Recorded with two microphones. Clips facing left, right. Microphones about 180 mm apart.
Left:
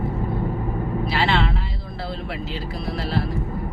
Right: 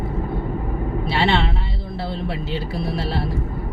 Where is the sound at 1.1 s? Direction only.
25° right (ahead or behind).